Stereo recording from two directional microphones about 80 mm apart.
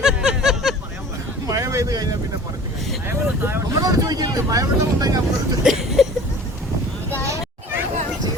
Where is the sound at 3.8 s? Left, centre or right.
Right.